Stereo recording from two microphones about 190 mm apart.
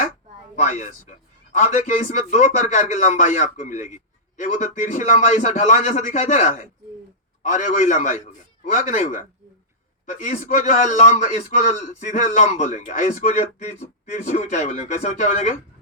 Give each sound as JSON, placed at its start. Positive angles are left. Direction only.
{"t": 0.5, "sound": "a man's voice", "side_deg": 35}